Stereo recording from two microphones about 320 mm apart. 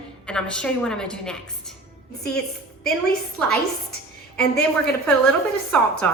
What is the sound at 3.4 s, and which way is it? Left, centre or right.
Speech, centre.